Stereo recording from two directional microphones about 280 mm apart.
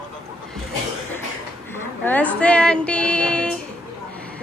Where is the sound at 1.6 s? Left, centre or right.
Centre.